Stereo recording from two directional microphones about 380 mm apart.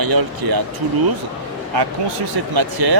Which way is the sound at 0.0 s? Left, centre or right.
Right.